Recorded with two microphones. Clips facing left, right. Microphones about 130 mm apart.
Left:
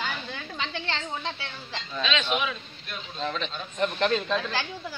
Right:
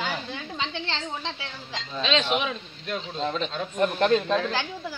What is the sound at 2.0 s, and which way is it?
A woman's voice, 30° right (ahead or behind).